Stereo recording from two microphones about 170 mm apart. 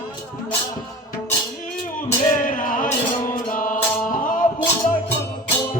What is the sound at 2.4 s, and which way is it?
Music, 50° left (ahead or behind).